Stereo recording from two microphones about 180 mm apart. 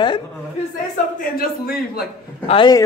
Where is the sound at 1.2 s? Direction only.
55° left (ahead or behind).